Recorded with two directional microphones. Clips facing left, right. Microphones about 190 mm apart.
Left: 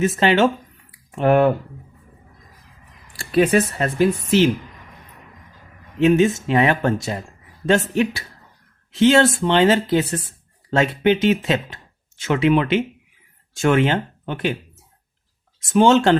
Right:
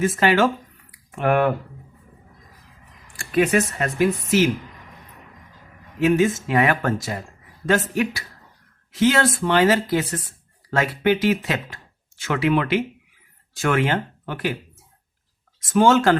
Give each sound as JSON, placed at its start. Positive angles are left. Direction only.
{"t": 0.0, "sound": "speech", "side_deg": 25}
{"t": 3.1, "sound": "speech", "side_deg": 35}
{"t": 6.0, "sound": "speech", "side_deg": 25}
{"t": 15.7, "sound": "speech", "side_deg": 20}